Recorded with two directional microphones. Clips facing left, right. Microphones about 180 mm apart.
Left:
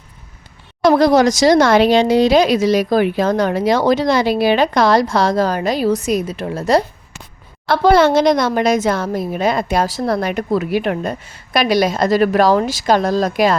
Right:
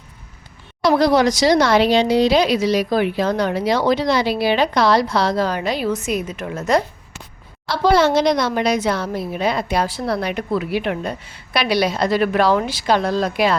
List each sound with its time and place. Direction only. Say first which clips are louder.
0.8 s speech: left 3 dB; 50° left (ahead or behind)
7.7 s speech: left 4 dB; 55° left (ahead or behind)